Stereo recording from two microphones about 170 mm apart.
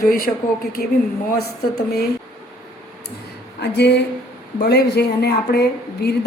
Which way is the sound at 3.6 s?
80° left.